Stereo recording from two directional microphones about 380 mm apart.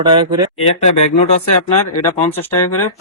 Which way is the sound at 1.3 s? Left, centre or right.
Centre.